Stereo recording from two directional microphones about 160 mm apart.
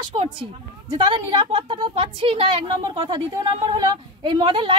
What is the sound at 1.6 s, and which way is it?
A woman's voice, 30° right (ahead or behind).